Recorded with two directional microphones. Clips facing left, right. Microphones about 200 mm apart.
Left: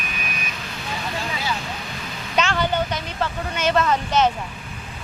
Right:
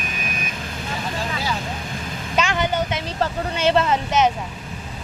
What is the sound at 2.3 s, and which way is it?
Vehicle, 10° right (ahead or behind).